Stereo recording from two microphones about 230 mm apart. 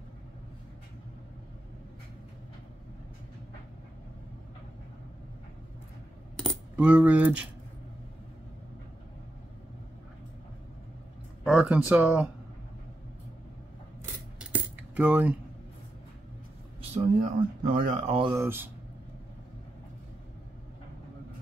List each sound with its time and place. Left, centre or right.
6.3 s coin: centre
11.4 s speech: centre
14.5 s cutlery: centre
16.9 s speech: right
18.3 s speech: centre